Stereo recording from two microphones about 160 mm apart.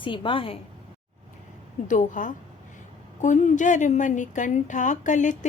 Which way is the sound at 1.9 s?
55° left (ahead or behind).